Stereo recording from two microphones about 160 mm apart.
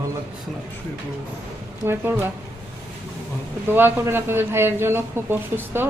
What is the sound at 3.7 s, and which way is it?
A man's voice, 15° right (ahead or behind).